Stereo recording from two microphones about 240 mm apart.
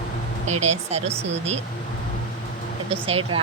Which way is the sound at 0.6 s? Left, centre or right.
Right.